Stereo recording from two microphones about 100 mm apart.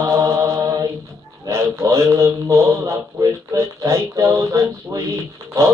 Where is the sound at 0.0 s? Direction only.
30° right (ahead or behind).